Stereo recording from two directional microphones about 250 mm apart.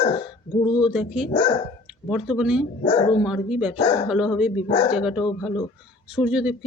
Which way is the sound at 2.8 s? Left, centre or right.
Centre.